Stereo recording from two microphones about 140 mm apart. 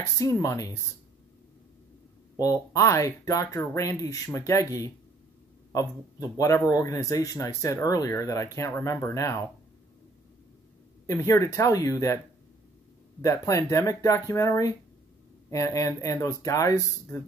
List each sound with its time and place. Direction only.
0.2 s speech: 20° left (ahead or behind)
2.3 s speech: 25° left (ahead or behind)
11.1 s speech: 20° left (ahead or behind)
13.2 s speech: 20° left (ahead or behind)